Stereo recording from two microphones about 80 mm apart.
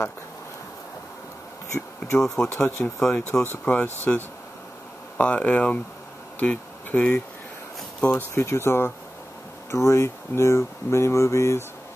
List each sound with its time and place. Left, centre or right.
2.1 s speech: centre
2.5 s speech: left
3.0 s speech: centre
3.6 s speech: left
8.4 s speech: left